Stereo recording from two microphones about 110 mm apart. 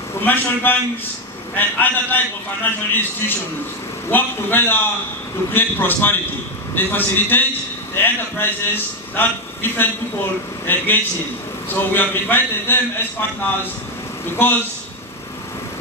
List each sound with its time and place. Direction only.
0.2 s a man's voice: 15° left (ahead or behind)
14.2 s a man's voice: 20° left (ahead or behind)